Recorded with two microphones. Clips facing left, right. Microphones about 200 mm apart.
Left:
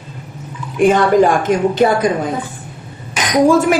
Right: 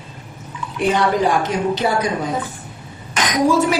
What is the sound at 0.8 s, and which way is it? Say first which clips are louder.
A woman's voice: left 6 dB; 50° left (ahead or behind).